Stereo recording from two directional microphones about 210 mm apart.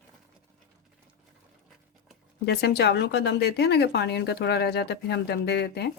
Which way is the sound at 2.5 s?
50° left (ahead or behind).